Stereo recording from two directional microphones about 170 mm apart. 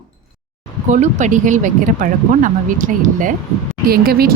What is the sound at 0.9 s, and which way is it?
Speech, 45° right (ahead or behind).